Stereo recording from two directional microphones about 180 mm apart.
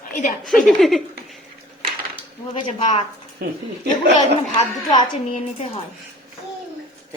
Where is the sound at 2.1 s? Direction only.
25° left (ahead or behind).